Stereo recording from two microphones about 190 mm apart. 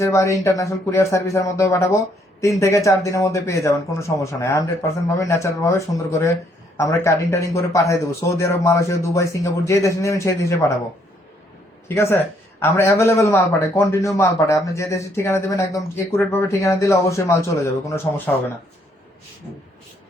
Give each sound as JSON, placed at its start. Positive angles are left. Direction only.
{"t": 0.0, "sound": "a man's voice", "side_deg": 15}
{"t": 11.9, "sound": "a man's voice", "side_deg": 10}